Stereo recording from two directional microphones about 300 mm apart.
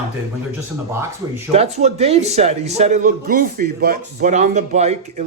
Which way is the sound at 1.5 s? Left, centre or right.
Right.